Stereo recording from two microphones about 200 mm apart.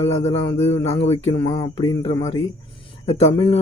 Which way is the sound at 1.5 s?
20° left (ahead or behind).